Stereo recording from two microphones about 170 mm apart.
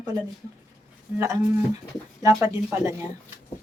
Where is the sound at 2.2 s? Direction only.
20° right (ahead or behind).